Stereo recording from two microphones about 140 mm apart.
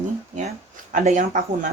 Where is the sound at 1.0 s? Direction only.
65° right (ahead or behind).